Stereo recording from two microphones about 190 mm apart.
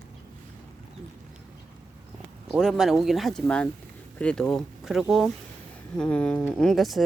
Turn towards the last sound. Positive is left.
turn(degrees=0)  # may be behind; listen again after turning